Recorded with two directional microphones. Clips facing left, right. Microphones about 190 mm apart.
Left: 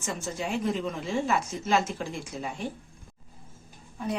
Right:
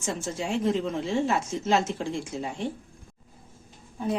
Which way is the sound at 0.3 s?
25° right (ahead or behind).